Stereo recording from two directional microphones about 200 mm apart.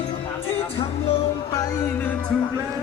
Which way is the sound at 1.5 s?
10° left (ahead or behind).